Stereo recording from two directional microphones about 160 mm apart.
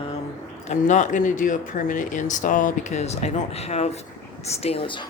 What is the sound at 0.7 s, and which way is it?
Speech, 50° left (ahead or behind).